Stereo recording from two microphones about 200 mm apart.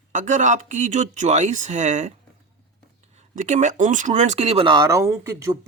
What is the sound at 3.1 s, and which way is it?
Speech, 35° right (ahead or behind).